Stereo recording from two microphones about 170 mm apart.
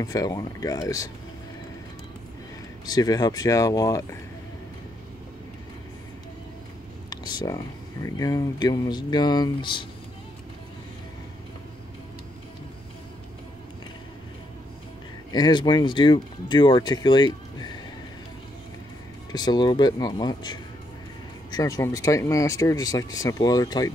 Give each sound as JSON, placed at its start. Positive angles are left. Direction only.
{"t": 0.0, "sound": "speech", "side_deg": 20}
{"t": 2.9, "sound": "speech", "side_deg": 20}
{"t": 7.1, "sound": "speech", "side_deg": 25}
{"t": 15.3, "sound": "speech", "side_deg": 25}
{"t": 19.3, "sound": "speech", "side_deg": 25}